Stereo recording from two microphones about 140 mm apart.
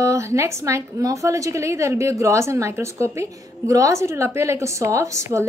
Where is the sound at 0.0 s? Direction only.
20° right (ahead or behind).